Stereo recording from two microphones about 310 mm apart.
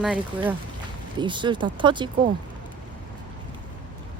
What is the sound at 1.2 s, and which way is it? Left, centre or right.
Speech, centre.